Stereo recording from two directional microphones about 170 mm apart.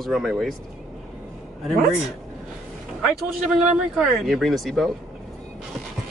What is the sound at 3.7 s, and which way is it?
Speech, centre (ahead or behind).